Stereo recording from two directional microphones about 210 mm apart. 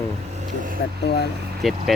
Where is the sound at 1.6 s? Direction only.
Centre (ahead or behind).